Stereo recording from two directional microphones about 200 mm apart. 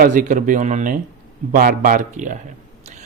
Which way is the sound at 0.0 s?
40° right (ahead or behind).